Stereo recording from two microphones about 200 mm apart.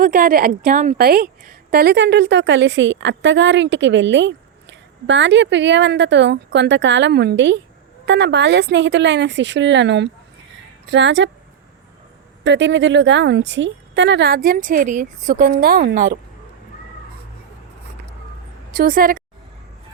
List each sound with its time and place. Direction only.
0.0 s a woman's voice: 45° right (ahead or behind); by 11.3 s 65° right (ahead or behind)
12.5 s a woman's voice: 65° right (ahead or behind); by 15.4 s 40° right (ahead or behind)
15.4 s a woman's voice: 50° right (ahead or behind)
18.7 s a woman's voice: 45° right (ahead or behind)